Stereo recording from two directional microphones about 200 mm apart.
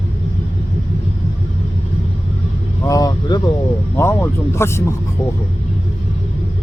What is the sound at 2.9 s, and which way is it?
Speech, 20° left (ahead or behind).